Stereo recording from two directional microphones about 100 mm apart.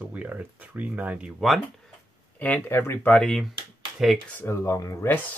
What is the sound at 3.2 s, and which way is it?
Speech, 5° left (ahead or behind).